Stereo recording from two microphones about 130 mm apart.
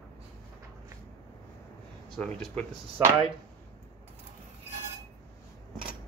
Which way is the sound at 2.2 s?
10° left (ahead or behind).